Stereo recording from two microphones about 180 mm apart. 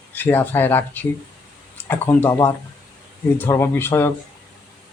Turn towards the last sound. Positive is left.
turn(degrees=15)  # may be behind; listen again after turning